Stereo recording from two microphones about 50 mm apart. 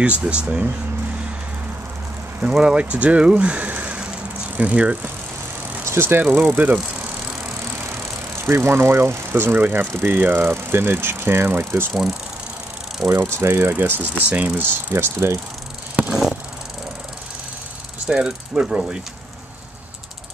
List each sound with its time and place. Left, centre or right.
0.0 s speech: right
2.6 s speech: right
5.9 s speech: right
7.8 s speech: right
10.4 s speech: right
11.9 s speech: centre
13.1 s speech: right
13.8 s speech: right
15.0 s speech: right
16.1 s a sound: centre
18.1 s mechanisms: centre